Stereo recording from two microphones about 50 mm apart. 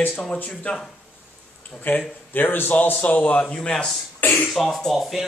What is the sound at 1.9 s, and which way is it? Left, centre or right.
Speech, left.